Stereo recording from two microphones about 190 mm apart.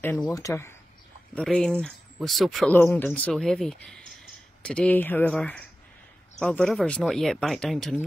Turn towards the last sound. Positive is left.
turn(degrees=5)  # may be behind; listen again after turning